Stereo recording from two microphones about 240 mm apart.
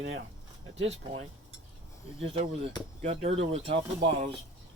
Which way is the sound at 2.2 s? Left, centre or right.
Right.